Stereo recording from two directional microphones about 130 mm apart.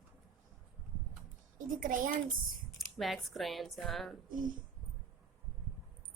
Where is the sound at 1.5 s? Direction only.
90° right.